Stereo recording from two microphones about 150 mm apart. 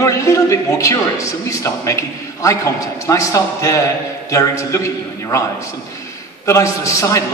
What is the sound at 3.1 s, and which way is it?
A man's voice, 20° left (ahead or behind).